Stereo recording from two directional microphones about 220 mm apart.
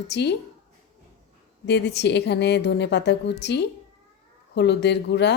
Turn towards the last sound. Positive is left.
turn(degrees=50)  # may be behind; listen again after turning